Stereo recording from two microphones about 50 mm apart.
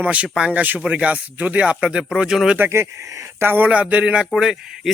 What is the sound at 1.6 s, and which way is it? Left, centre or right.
Speech, centre.